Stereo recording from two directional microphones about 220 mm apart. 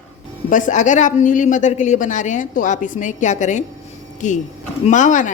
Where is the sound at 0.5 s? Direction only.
35° left (ahead or behind).